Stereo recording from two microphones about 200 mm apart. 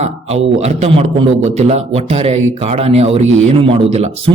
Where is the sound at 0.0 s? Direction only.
30° right (ahead or behind).